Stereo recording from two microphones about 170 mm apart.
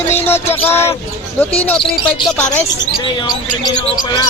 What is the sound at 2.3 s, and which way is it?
Speech, 5° left (ahead or behind).